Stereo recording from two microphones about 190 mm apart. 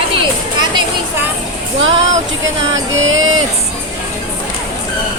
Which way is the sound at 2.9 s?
90° right.